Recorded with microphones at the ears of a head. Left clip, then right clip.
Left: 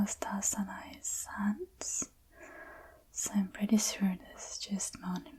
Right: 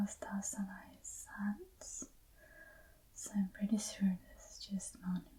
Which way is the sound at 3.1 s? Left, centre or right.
Left.